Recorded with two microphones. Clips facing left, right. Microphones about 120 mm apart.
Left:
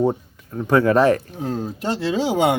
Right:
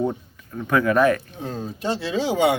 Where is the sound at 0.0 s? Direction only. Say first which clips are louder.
Left 5 dB; 35° left (ahead or behind).